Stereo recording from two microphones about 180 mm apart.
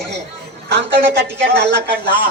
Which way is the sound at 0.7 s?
70° right (ahead or behind).